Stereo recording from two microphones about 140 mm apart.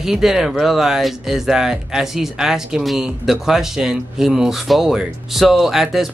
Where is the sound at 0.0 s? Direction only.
5° right (ahead or behind).